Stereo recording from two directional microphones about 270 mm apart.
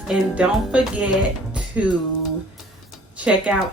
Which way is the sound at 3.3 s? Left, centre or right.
Centre.